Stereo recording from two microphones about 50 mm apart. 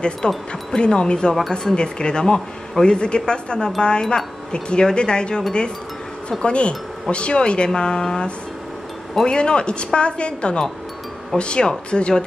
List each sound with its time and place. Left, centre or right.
0.2 s speech: centre
6.4 s speech: left